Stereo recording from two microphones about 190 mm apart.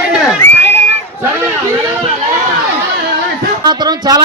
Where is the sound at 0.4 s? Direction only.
10° left (ahead or behind).